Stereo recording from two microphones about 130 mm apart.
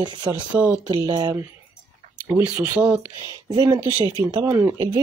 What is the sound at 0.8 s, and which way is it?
Speech, 35° right (ahead or behind).